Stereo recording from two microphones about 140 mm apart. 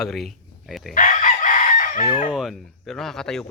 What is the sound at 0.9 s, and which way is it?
Chicken, 70° left (ahead or behind).